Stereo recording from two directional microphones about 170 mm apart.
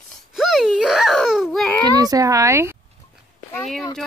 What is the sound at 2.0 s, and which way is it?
Speech, 20° right (ahead or behind).